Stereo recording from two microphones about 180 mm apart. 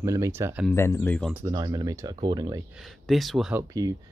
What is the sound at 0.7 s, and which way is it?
Speech, 15° left (ahead or behind).